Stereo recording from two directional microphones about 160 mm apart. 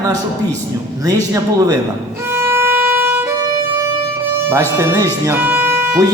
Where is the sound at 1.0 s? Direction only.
20° right (ahead or behind).